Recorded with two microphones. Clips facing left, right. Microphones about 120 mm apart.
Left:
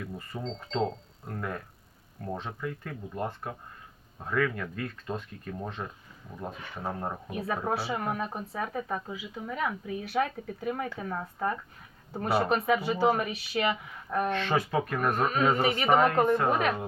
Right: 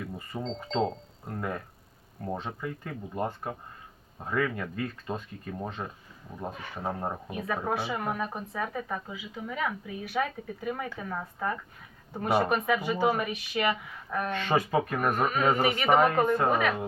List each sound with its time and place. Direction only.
0.3 s speech: 25° right (ahead or behind)
1.3 s speech: 10° right (ahead or behind)
7.3 s speech: 5° left (ahead or behind)
14.3 s speech: 10° right (ahead or behind)